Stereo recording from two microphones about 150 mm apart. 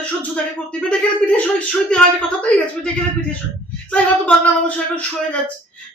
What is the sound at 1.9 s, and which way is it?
A woman's voice, 10° left (ahead or behind).